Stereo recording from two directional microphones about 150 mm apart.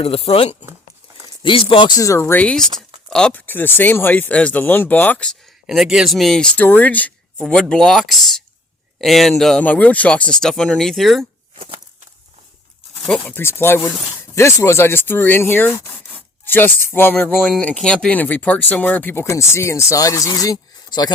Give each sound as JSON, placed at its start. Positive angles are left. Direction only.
{"t": 0.0, "sound": "speech", "side_deg": 40}
{"t": 2.0, "sound": "speech", "side_deg": 20}
{"t": 5.6, "sound": "speech", "side_deg": 0}
{"t": 11.5, "sound": "a sound", "side_deg": -35}
{"t": 13.1, "sound": "speech", "side_deg": 10}